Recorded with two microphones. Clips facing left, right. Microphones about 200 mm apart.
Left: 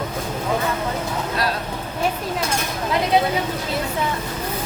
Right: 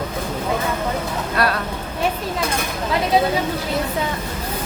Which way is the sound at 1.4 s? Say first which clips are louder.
Right 5 dB; 60° right (ahead or behind).